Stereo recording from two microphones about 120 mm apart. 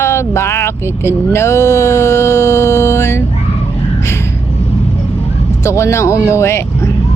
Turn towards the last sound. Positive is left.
turn(degrees=25)  # may be behind; listen again after turning